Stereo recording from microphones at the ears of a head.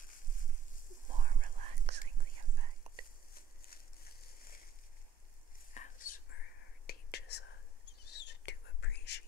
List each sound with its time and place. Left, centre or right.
1.0 s whispering: right
5.7 s whispering: left